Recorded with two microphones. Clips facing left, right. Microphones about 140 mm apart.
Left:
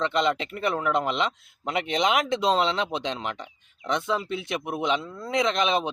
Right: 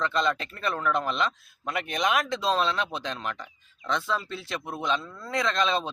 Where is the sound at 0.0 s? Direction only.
20° left (ahead or behind).